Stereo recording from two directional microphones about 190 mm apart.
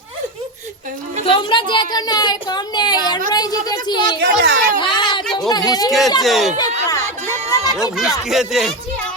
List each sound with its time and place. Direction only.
1.2 s a woman's voice: 25° left (ahead or behind)
4.2 s a sound: 60° right (ahead or behind)
4.8 s a sound: 25° left (ahead or behind)
5.5 s a woman's voice: 20° left (ahead or behind)
6.2 s speech: centre (ahead or behind)
6.6 s music: 20° left (ahead or behind)
8.3 s speech: centre (ahead or behind)